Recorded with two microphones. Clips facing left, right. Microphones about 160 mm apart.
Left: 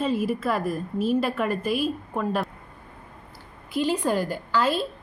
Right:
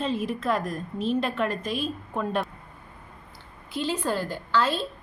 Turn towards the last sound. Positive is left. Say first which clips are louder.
# left 1 dB
turn(degrees=10)  # may be behind; listen again after turning